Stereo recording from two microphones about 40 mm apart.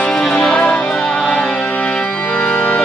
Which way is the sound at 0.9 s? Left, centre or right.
Left.